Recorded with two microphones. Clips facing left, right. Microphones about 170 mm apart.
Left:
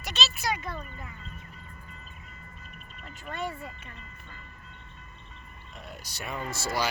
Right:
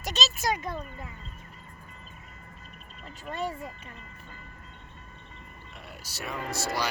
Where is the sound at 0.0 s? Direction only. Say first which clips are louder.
Right 2 dB; 40° right (ahead or behind).